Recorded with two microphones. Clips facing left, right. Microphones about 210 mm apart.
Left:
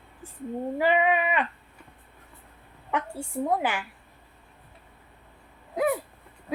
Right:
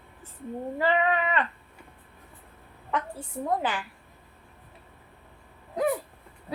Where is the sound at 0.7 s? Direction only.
15° left (ahead or behind).